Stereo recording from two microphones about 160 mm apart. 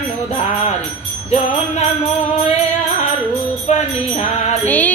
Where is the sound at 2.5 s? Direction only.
45° left (ahead or behind).